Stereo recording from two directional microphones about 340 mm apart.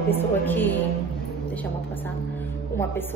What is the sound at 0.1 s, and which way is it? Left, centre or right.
A woman's voice, centre.